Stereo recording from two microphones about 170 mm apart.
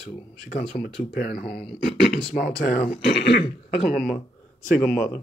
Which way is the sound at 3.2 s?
75° left (ahead or behind).